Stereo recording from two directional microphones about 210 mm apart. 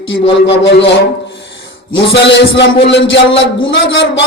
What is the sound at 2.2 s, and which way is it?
Speech, 60° left (ahead or behind).